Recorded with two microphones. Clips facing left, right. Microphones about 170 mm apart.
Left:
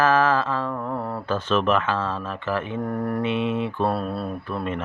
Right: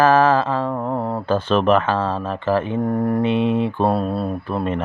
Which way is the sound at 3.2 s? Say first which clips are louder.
Right 5 dB; 30° right (ahead or behind).